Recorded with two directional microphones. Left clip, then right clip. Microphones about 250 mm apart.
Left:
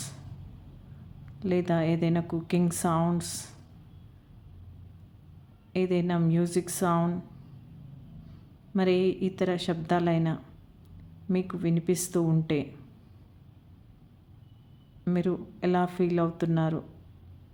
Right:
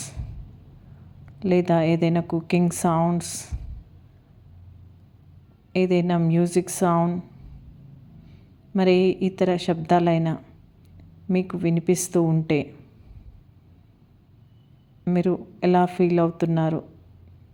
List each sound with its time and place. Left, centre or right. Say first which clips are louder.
1.2 s a woman's voice: right 7 dB; centre
5.7 s a woman's voice: right 6 dB; centre
8.7 s a woman's voice: right 6 dB; centre
15.0 s a woman's voice: right 6 dB; centre